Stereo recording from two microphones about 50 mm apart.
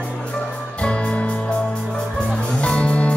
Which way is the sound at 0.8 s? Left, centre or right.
Left.